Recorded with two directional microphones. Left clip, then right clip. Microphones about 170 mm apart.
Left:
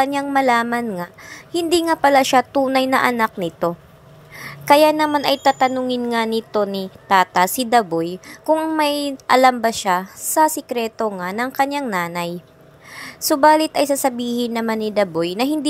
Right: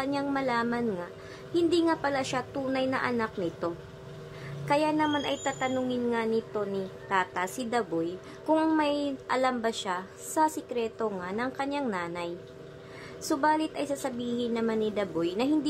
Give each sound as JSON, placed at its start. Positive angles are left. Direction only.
{"t": 0.0, "sound": "a woman's voice", "side_deg": 30}